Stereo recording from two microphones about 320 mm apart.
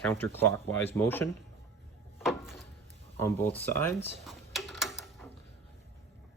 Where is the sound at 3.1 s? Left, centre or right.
Centre.